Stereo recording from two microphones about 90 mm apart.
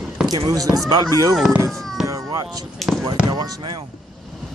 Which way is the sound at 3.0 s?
50° right (ahead or behind).